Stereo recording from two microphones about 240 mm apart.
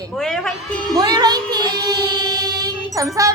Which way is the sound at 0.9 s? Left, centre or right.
Centre.